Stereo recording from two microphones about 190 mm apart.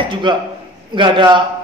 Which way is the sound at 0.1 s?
25° right (ahead or behind).